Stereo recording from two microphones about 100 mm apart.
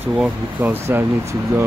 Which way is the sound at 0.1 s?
10° right (ahead or behind).